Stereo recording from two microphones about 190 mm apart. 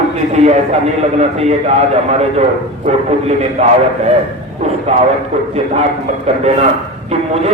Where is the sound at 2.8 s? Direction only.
35° right (ahead or behind).